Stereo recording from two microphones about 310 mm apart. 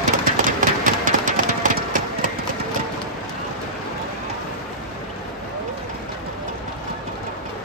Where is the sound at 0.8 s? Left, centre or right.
Right.